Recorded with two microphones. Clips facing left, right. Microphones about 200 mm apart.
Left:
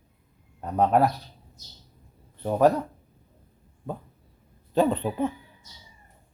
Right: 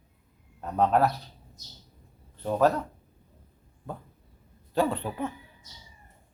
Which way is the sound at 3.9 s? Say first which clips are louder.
Left 4 dB; 20° left (ahead or behind).